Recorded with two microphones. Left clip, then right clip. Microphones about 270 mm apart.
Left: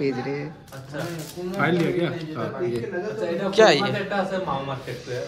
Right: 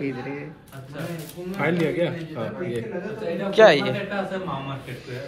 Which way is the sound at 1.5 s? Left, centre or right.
Centre.